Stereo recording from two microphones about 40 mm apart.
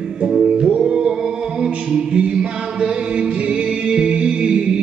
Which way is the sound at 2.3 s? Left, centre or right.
Right.